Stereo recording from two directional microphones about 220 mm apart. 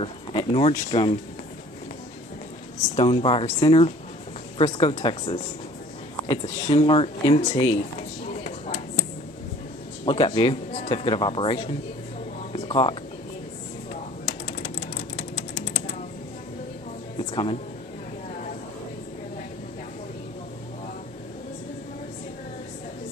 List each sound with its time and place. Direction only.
0.0 s speech: 25° left (ahead or behind)
3.0 s speech: 25° left (ahead or behind)
10.0 s speech: 20° left (ahead or behind)
12.5 s a sound: 20° left (ahead or behind)
17.2 s music: 25° left (ahead or behind)